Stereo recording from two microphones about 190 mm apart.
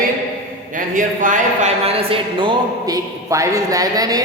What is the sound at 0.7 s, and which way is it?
A woman's voice, 45° right (ahead or behind).